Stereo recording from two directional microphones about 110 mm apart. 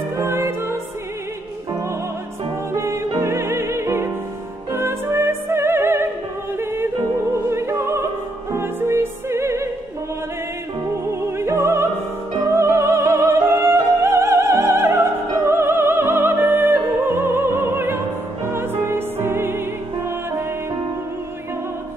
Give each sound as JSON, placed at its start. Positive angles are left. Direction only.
{"t": 0.2, "sound": "music", "side_deg": -25}
{"t": 2.7, "sound": "music", "side_deg": -25}
{"t": 7.4, "sound": "music", "side_deg": -25}
{"t": 11.1, "sound": "music", "side_deg": -25}
{"t": 12.5, "sound": "opera", "side_deg": -25}
{"t": 18.5, "sound": "music", "side_deg": -20}